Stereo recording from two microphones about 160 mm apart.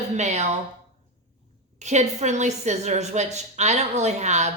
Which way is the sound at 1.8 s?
45° right (ahead or behind).